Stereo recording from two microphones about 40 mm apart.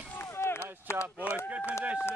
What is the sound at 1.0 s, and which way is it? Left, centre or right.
Speech, right.